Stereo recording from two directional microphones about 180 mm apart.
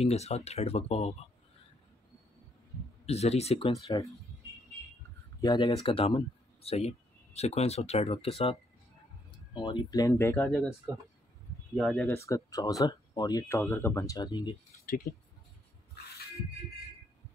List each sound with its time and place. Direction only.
0.0 s speech: 35° left (ahead or behind)
3.1 s speech: 35° left (ahead or behind)
5.4 s speech: 25° left (ahead or behind)
10.3 s speech: centre (ahead or behind)
11.7 s speech: centre (ahead or behind); by 14.5 s 25° left (ahead or behind)
15.1 s speech: 55° left (ahead or behind)